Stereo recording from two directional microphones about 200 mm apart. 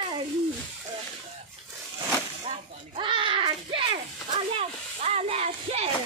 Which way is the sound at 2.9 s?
25° right (ahead or behind).